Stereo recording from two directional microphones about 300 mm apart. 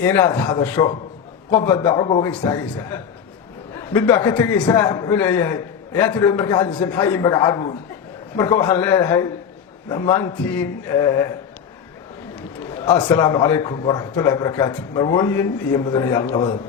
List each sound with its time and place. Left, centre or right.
0.0 s a man's voice: centre
12.8 s a man's voice: centre